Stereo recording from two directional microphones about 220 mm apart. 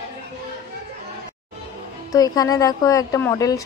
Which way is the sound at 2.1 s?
15° left (ahead or behind).